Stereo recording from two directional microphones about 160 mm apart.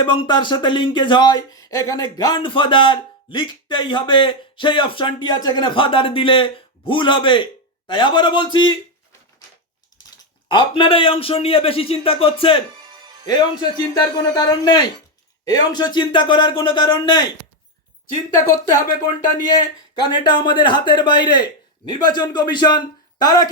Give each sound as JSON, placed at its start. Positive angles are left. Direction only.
{"t": 0.0, "sound": "speech", "side_deg": 30}
{"t": 10.5, "sound": "speech", "side_deg": 30}
{"t": 18.8, "sound": "speech", "side_deg": 25}